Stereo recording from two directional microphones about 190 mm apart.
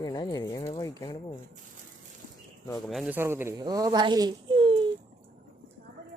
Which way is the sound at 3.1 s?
10° right (ahead or behind).